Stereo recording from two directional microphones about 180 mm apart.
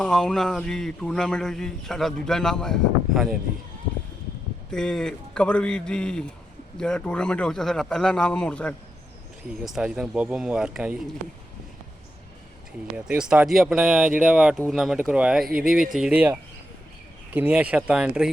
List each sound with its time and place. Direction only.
0.0 s speech: 5° left (ahead or behind)
4.7 s speech: 5° left (ahead or behind)
13.1 s speech: 5° right (ahead or behind)
15.4 s speech: 55° right (ahead or behind)
15.7 s speech: centre (ahead or behind)